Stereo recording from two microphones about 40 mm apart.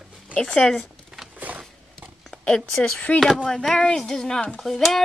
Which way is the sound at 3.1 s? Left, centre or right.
Left.